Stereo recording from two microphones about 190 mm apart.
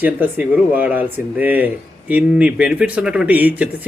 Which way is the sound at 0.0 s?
10° right (ahead or behind).